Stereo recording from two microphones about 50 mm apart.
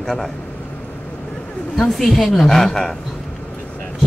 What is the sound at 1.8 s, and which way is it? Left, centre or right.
Speech, centre.